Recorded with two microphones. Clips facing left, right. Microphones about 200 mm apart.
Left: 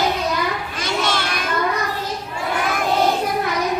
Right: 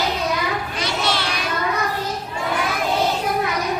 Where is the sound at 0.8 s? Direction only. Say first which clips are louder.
Left 2 dB; 50° left (ahead or behind).